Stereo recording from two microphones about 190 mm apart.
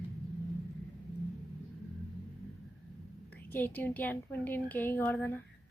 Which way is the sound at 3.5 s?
10° left (ahead or behind).